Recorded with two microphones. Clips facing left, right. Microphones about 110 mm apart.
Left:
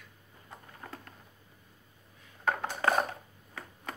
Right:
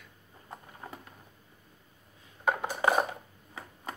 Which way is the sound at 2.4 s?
15° right (ahead or behind).